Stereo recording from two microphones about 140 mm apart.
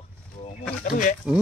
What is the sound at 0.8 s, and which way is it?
Speech, 65° left (ahead or behind).